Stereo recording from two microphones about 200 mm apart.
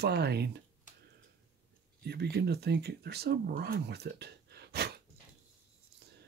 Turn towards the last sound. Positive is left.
turn(degrees=-55)  # may be behind; listen again after turning